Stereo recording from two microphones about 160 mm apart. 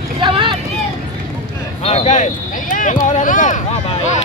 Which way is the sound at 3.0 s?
50° left (ahead or behind).